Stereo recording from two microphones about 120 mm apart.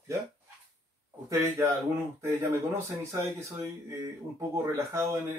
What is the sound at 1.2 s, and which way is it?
Speech, 20° right (ahead or behind).